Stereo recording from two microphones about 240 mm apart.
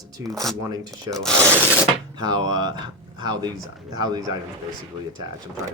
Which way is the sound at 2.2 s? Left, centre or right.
Centre.